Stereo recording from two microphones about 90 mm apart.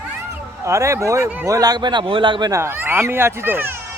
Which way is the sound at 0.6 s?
30° right (ahead or behind).